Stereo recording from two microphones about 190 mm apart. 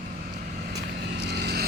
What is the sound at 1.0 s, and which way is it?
Vehicle, 65° right (ahead or behind).